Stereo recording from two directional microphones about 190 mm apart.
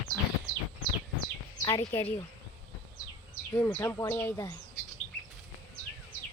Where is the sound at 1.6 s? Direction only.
20° left (ahead or behind).